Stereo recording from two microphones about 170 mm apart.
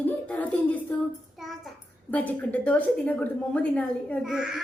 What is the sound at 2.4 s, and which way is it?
A woman's voice, 10° left (ahead or behind).